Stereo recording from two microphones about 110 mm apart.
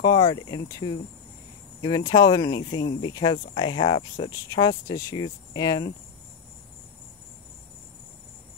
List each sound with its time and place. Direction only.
0.0 s speech: 35° left (ahead or behind)
4.3 s speech: 35° left (ahead or behind)